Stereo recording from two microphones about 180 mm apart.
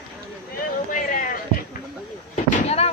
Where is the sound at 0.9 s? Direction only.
45° left (ahead or behind).